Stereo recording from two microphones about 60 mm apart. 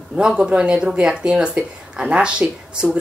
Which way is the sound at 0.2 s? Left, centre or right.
Centre.